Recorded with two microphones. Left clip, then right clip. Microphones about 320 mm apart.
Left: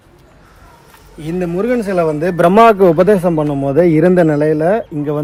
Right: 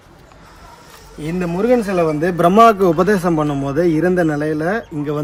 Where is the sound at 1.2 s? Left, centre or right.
Centre.